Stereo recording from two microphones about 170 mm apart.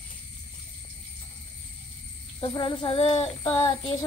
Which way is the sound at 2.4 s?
30° left (ahead or behind).